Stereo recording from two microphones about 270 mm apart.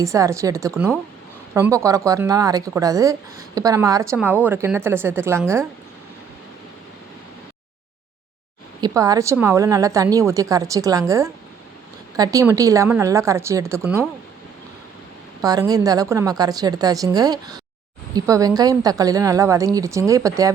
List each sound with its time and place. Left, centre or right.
0.0 s a woman's voice: centre
8.8 s a woman's voice: centre
15.4 s a woman's voice: centre